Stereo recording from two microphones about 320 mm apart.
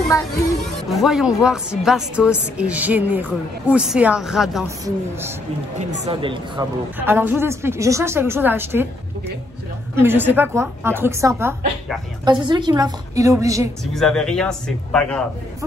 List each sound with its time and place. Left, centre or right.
0.1 s speech: centre
0.8 s a woman's voice: centre
5.8 s a woman's voice: right
9.9 s a woman's voice: centre
13.9 s a woman's voice: centre